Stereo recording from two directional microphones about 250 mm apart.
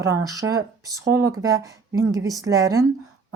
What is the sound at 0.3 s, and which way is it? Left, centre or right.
Speech, centre.